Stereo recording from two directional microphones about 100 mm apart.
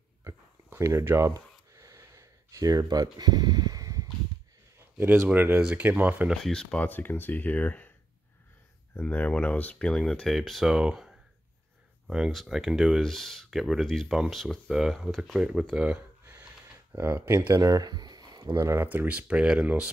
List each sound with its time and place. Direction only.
0.2 s a sound: 30° right (ahead or behind)
5.3 s speech: 20° right (ahead or behind)
6.3 s speech: 5° left (ahead or behind)
9.0 s speech: 15° left (ahead or behind); by 16.0 s 5° right (ahead or behind)
16.9 s speech: 25° right (ahead or behind)
18.9 s speech: 15° right (ahead or behind)